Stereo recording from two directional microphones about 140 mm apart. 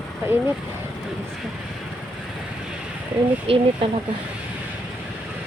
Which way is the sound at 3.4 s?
40° right (ahead or behind).